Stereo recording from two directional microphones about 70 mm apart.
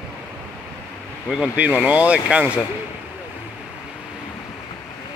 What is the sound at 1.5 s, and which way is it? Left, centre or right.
Speech, centre.